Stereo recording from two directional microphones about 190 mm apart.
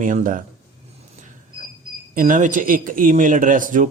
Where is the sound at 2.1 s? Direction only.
45° right (ahead or behind).